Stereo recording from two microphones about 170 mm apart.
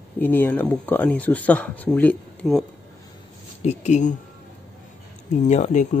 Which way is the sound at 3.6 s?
40° left (ahead or behind).